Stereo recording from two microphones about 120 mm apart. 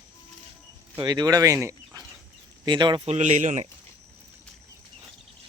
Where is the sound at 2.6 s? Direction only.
40° right (ahead or behind).